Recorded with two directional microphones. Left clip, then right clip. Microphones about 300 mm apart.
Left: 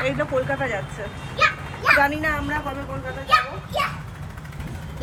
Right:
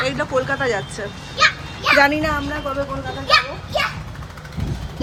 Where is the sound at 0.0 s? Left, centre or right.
Centre.